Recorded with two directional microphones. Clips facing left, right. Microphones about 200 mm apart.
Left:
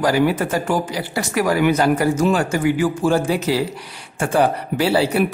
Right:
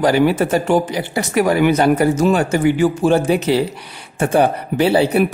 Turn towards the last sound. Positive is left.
turn(degrees=-20)  # may be behind; listen again after turning